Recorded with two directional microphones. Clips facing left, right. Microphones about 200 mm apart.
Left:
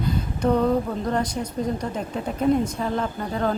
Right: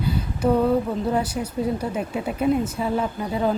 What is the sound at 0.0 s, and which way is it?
Speech, 5° right (ahead or behind).